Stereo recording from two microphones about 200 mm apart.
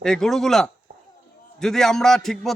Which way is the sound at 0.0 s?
5° left (ahead or behind).